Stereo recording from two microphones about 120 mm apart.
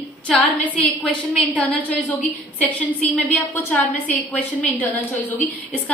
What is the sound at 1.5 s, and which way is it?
A woman's voice, 10° left (ahead or behind).